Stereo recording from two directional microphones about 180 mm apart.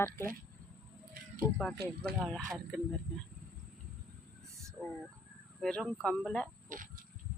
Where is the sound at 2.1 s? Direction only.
60° right (ahead or behind).